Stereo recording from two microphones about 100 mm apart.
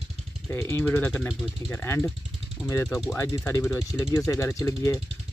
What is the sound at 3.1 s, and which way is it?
Speech, 25° left (ahead or behind).